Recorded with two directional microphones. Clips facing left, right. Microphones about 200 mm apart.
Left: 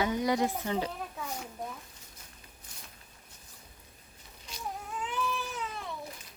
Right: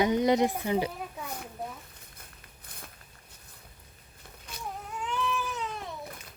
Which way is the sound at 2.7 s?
60° right (ahead or behind).